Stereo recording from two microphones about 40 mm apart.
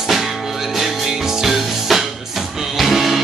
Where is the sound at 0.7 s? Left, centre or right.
Centre.